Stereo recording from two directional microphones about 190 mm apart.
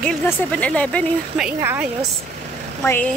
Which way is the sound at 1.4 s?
10° right (ahead or behind).